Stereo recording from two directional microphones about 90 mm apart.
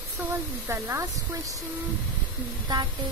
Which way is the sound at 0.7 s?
30° right (ahead or behind).